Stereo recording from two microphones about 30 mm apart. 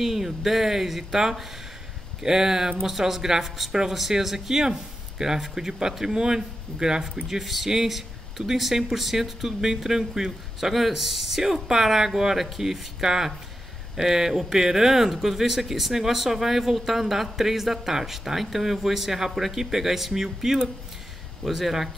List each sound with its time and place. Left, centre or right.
0.0 s speech: centre
3.4 s speech: centre; by 7.0 s right
7.2 s speech: centre